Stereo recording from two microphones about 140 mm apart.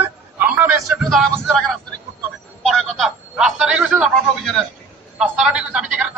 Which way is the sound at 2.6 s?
Centre (ahead or behind).